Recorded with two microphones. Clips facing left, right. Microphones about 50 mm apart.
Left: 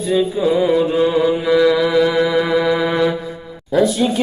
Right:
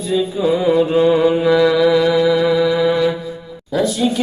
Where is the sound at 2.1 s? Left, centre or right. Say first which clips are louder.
Right 2 dB; left.